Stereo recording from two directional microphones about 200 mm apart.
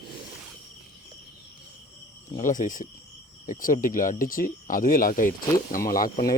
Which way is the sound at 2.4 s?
40° left (ahead or behind).